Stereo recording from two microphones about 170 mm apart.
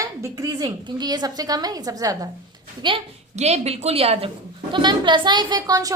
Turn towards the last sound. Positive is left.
turn(degrees=-20)  # may be behind; listen again after turning